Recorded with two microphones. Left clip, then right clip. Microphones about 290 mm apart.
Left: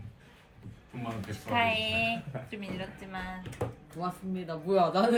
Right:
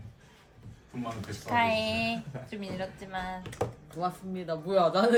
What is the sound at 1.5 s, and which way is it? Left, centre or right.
A woman's voice, right.